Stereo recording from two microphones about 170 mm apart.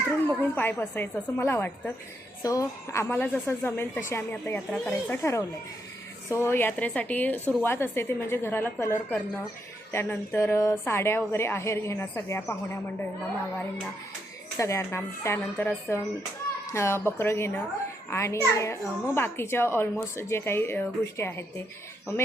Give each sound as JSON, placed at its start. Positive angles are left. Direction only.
{"t": 0.3, "sound": "a child's voice", "side_deg": 10}
{"t": 14.6, "sound": "a child's voice", "side_deg": 15}